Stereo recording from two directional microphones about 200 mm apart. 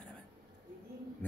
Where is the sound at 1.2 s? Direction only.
10° left (ahead or behind).